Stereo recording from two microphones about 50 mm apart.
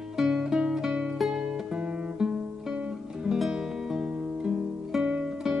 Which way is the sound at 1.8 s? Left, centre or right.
Right.